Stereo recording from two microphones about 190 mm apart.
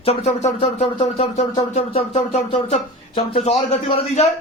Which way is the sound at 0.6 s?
30° left (ahead or behind).